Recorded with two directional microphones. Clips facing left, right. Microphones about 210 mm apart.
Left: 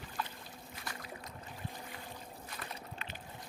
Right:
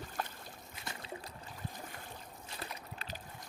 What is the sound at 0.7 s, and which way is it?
Trickle, 25° right (ahead or behind).